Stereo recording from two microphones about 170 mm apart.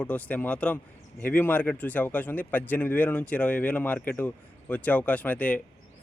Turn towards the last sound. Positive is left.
turn(degrees=10)  # may be behind; listen again after turning